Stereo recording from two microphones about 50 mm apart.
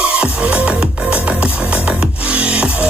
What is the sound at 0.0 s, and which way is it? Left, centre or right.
Music, centre.